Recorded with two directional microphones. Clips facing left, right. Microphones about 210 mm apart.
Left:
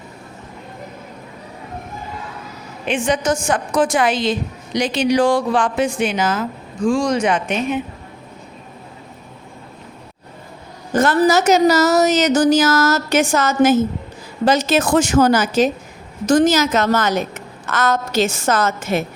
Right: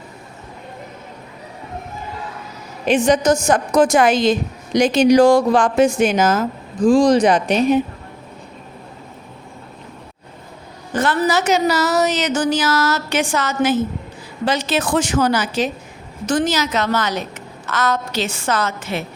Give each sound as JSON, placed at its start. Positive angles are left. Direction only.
{"t": 2.8, "sound": "a woman's voice", "side_deg": -40}
{"t": 10.9, "sound": "a woman's voice", "side_deg": 45}